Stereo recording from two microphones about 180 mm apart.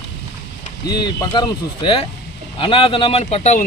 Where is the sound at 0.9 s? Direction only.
20° left (ahead or behind).